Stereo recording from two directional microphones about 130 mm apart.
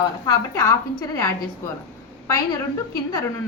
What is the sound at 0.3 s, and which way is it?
A woman's voice, 20° left (ahead or behind).